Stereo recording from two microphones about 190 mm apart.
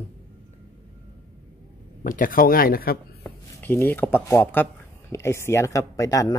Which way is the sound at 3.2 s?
10° left (ahead or behind).